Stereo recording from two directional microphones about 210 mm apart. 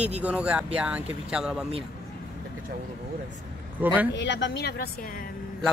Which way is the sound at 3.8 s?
10° right (ahead or behind).